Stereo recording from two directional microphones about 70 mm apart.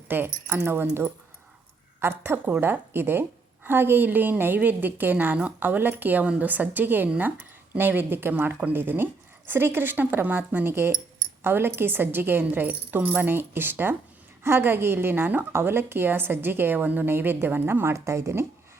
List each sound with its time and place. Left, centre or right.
0.1 s a woman's voice: right
17.9 s a woman's voice: right